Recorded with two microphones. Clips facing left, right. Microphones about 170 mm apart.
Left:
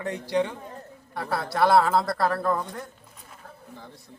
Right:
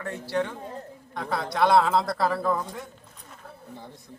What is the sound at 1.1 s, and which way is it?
A woman's voice, 5° left (ahead or behind).